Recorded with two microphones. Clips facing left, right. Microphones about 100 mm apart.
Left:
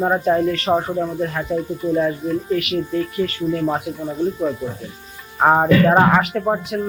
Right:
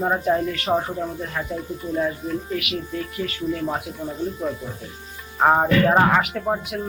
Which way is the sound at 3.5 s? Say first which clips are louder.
Left 8 dB; 10° left (ahead or behind).